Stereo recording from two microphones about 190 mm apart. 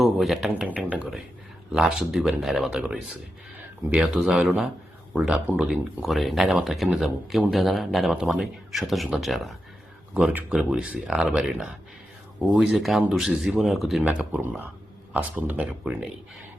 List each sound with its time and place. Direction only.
0.0 s speech: centre (ahead or behind)